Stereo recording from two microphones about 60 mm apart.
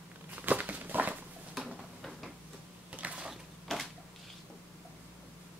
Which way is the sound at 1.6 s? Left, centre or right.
Centre.